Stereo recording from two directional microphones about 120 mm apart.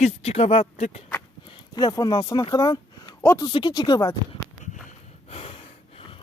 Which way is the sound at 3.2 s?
20° left (ahead or behind).